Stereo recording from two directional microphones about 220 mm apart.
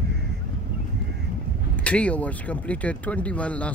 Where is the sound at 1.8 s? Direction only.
5° left (ahead or behind).